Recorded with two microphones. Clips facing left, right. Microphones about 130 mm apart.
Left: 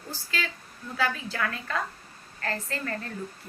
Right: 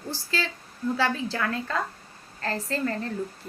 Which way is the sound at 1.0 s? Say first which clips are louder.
Even; 30° right (ahead or behind).